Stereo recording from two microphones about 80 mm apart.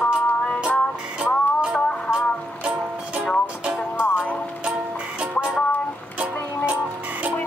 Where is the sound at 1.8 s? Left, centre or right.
Centre.